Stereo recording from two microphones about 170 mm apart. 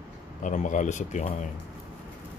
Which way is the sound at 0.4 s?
50° left (ahead or behind).